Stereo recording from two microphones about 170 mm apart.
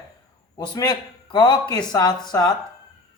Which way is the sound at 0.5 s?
20° left (ahead or behind).